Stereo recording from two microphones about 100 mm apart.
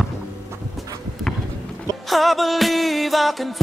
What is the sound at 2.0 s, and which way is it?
Music, centre (ahead or behind).